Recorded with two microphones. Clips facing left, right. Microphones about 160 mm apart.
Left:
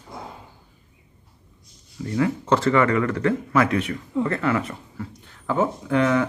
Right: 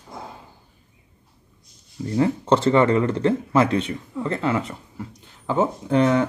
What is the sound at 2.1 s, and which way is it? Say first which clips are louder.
Speech: right 2 dB; 30° right (ahead or behind).